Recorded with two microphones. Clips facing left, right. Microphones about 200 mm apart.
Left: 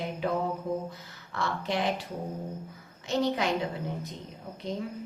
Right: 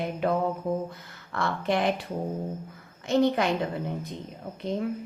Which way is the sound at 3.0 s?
55° right (ahead or behind).